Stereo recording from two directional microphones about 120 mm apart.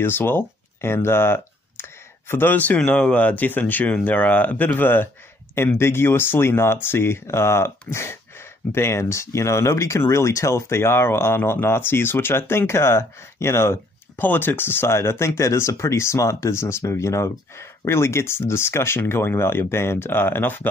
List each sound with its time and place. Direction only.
0.0 s speech: 20° left (ahead or behind)